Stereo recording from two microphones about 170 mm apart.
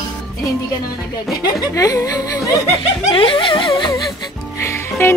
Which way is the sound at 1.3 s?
20° left (ahead or behind).